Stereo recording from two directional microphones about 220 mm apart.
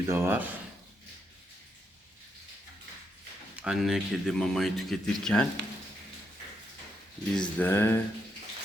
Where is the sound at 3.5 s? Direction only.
5° right (ahead or behind).